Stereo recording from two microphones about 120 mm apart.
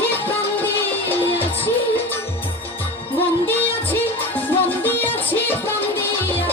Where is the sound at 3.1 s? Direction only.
15° left (ahead or behind).